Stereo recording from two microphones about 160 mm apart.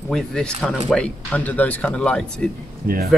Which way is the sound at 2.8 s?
70° right (ahead or behind).